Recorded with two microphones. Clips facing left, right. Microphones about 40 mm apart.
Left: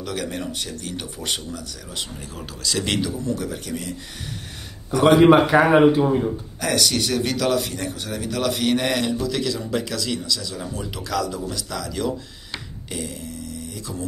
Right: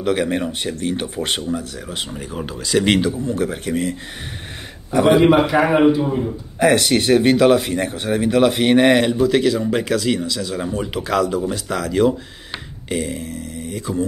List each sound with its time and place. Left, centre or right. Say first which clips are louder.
0.0 s speech: right 9 dB; right
5.3 s speech: even; left
6.6 s speech: right 7 dB; right